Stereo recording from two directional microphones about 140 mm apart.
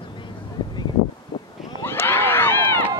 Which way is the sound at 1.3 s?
30° left (ahead or behind).